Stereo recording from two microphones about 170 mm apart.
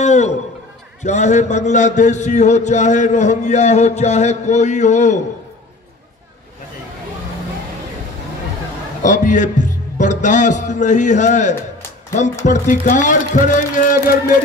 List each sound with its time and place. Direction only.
0.0 s a sound: 45° left (ahead or behind)
1.0 s a man's voice: 45° left (ahead or behind)
9.0 s a man's voice: 50° left (ahead or behind)